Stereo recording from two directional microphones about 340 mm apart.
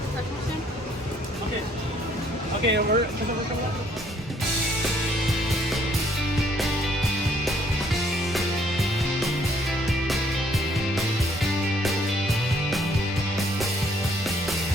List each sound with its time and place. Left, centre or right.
2.6 s speech: right
8.3 s music: centre